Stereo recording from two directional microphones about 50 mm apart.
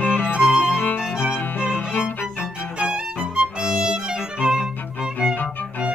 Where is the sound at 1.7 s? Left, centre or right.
Left.